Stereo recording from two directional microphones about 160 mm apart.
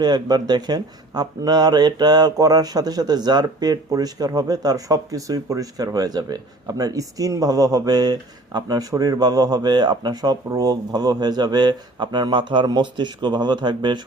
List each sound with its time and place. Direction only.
0.0 s speech: 25° right (ahead or behind)